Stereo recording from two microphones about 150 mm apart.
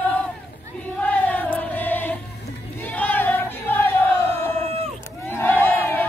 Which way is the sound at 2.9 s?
10° left (ahead or behind).